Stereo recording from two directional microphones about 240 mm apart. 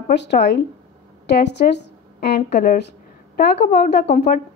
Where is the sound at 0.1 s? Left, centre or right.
Left.